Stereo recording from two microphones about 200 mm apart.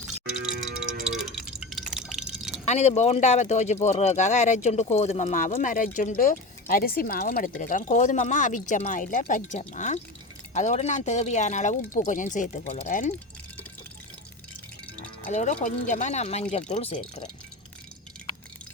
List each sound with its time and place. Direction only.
1.0 s drip: centre (ahead or behind)
2.6 s speech: 35° left (ahead or behind)
15.3 s speech: 35° left (ahead or behind)